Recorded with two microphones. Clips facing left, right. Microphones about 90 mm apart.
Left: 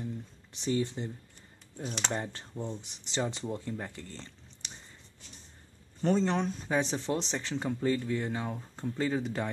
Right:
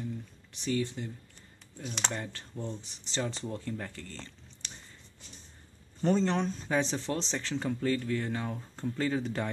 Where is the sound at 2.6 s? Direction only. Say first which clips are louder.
Left 1 dB; 15° left (ahead or behind).